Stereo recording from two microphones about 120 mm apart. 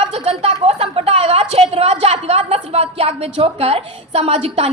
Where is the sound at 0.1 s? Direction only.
55° right (ahead or behind).